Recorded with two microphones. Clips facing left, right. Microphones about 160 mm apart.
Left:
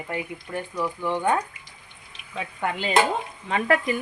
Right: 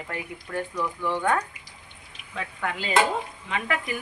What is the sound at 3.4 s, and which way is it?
Speech, 40° left (ahead or behind).